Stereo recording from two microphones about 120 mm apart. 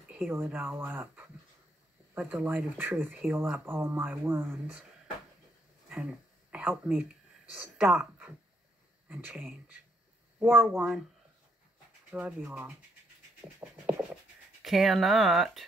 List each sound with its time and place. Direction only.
0.2 s speech: 15° right (ahead or behind)
2.4 s speech: 15° right (ahead or behind)
5.9 s a sound: 10° right (ahead or behind)
7.5 s speech: 10° right (ahead or behind)
12.1 s speech: 10° right (ahead or behind)
14.6 s speech: centre (ahead or behind)